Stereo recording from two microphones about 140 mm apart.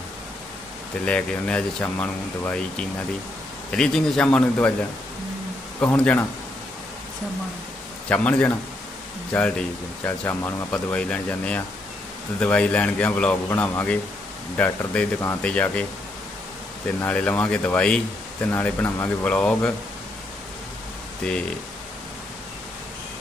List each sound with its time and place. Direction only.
1.0 s speech: 10° left (ahead or behind)
5.8 s speech: 10° left (ahead or behind)
8.1 s speech: 10° left (ahead or behind)
17.0 s speech: 10° left (ahead or behind)
21.2 s speech: 5° left (ahead or behind)